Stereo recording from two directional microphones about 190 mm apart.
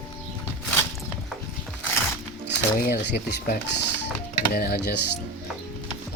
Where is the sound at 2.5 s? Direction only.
65° left (ahead or behind).